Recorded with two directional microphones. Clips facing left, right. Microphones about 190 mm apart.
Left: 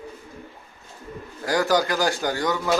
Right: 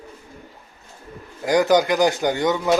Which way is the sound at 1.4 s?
20° right (ahead or behind).